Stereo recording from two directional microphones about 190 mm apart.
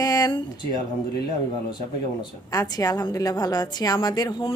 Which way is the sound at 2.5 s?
20° left (ahead or behind).